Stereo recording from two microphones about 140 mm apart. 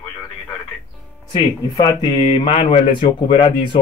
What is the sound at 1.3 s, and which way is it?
Speech, 30° left (ahead or behind).